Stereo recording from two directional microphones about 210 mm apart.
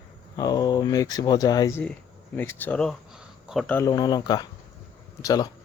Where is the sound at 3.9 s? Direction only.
20° left (ahead or behind).